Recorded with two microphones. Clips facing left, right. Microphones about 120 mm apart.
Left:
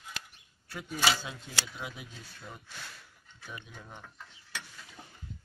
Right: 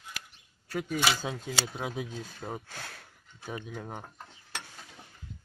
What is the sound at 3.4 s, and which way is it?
Speech, 50° right (ahead or behind).